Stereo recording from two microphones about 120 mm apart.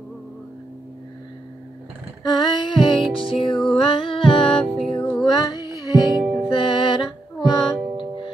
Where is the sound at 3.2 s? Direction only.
45° left (ahead or behind).